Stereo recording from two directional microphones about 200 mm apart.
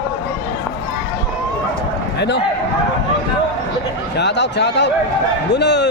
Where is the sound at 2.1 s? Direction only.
55° left (ahead or behind).